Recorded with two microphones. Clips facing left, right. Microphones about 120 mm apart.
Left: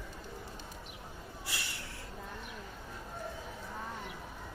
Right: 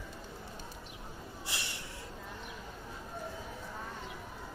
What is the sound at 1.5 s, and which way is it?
Snort, 20° right (ahead or behind).